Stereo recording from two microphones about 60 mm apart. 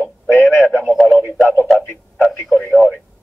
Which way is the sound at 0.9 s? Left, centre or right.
Centre.